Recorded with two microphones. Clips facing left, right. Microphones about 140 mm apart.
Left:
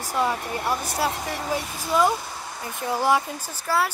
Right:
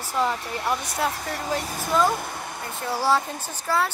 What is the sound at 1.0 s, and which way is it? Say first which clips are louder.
Speech: left 1 dB; 10° left (ahead or behind).